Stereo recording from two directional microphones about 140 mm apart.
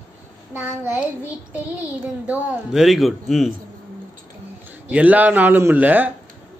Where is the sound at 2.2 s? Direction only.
Centre (ahead or behind).